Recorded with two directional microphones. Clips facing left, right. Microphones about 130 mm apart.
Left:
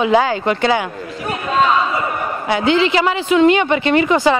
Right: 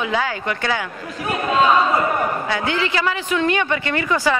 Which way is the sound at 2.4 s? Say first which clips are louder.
Left 7 dB; 20° left (ahead or behind).